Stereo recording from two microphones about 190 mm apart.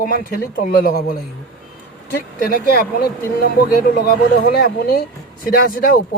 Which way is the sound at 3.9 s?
55° left (ahead or behind).